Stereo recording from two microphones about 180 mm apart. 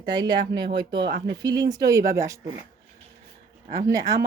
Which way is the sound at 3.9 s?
20° right (ahead or behind).